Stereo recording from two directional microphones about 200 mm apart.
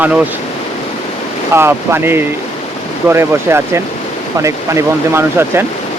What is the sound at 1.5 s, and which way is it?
Speech, 10° right (ahead or behind).